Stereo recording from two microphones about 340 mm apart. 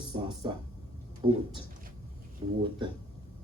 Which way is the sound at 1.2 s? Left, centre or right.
Centre.